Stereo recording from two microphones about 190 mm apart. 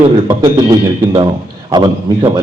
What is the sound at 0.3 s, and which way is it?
A man's voice, 20° right (ahead or behind).